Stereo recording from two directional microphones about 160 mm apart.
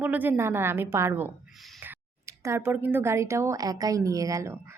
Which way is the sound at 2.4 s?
15° right (ahead or behind).